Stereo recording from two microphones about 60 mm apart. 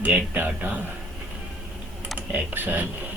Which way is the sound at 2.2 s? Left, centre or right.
Right.